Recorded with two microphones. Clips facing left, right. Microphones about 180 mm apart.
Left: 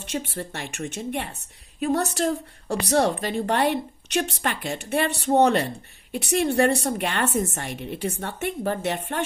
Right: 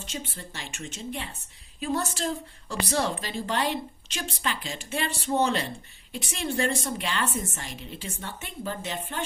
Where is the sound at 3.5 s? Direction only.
65° left (ahead or behind).